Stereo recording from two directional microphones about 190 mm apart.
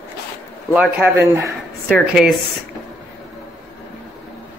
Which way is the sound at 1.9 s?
Centre (ahead or behind).